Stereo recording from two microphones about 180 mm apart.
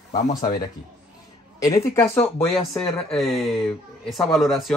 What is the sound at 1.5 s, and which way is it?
Speech, 20° left (ahead or behind).